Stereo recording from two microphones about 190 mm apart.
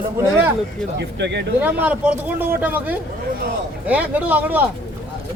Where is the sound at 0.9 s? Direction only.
65° right (ahead or behind).